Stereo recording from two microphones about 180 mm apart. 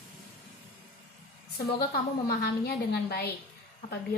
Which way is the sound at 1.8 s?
60° left (ahead or behind).